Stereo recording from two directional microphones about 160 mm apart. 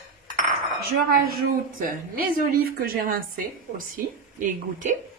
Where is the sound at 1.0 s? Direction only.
65° right (ahead or behind).